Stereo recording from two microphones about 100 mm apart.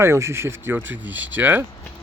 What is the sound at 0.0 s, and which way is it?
Speech, 25° right (ahead or behind).